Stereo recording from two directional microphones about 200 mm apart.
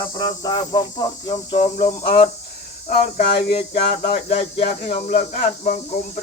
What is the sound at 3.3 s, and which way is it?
Cricket, 30° left (ahead or behind).